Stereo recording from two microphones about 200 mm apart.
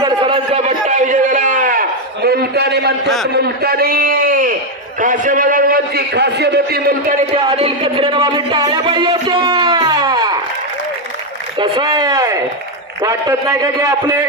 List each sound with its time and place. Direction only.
0.0 s a sound: 25° right (ahead or behind); by 2.9 s 55° right (ahead or behind)
3.3 s a man's voice: 55° right (ahead or behind)
7.2 s speech: 30° right (ahead or behind)
11.5 s a man's voice: 25° right (ahead or behind)